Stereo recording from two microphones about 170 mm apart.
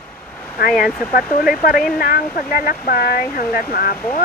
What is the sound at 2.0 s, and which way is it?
Speech, 60° left (ahead or behind).